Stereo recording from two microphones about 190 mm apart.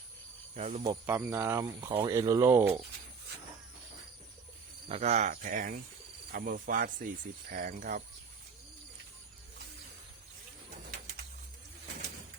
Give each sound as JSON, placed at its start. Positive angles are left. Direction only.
{"t": 0.5, "sound": "speech", "side_deg": -40}
{"t": 0.9, "sound": "speech", "side_deg": -10}
{"t": 4.9, "sound": "speech", "side_deg": -35}